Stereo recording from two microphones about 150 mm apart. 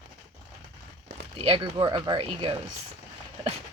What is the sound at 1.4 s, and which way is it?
Speech, 35° right (ahead or behind).